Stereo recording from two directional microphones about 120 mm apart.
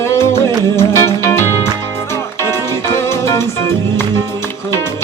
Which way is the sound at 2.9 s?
20° left (ahead or behind).